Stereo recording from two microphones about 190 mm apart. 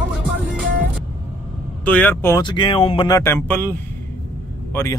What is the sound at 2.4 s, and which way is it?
Speech, 25° left (ahead or behind).